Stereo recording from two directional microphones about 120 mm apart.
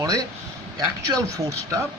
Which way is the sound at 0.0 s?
30° right (ahead or behind).